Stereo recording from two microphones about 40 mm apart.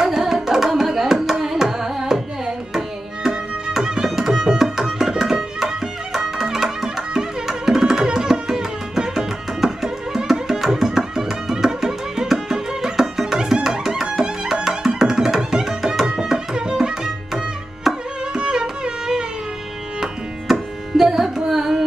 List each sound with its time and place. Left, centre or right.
0.0 s tabla: centre
1.2 s carnatic music: centre
3.8 s music: centre
17.9 s tabla: centre
18.3 s music: right
20.0 s tabla: centre
21.5 s carnatic music: centre